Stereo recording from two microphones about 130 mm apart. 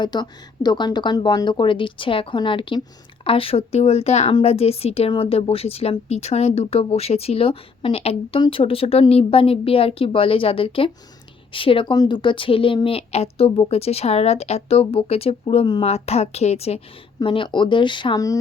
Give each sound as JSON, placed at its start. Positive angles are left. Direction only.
{"t": 0.0, "sound": "a woman's voice", "side_deg": 35}
{"t": 15.8, "sound": "a woman's voice", "side_deg": 50}
{"t": 17.2, "sound": "a woman's voice", "side_deg": 40}